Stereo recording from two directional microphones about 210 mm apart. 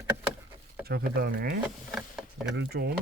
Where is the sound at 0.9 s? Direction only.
45° right (ahead or behind).